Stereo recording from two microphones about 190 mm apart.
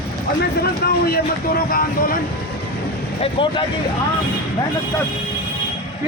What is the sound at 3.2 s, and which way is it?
Speech, 25° left (ahead or behind).